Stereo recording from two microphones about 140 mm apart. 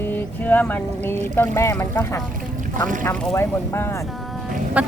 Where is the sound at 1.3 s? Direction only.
20° left (ahead or behind).